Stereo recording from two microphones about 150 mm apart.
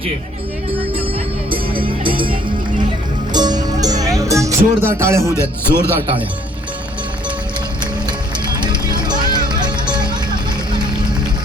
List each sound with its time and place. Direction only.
1.9 s music: 35° right (ahead or behind)
3.3 s music: 25° right (ahead or behind)
5.3 s speech: 15° left (ahead or behind)
8.0 s music: 30° right (ahead or behind)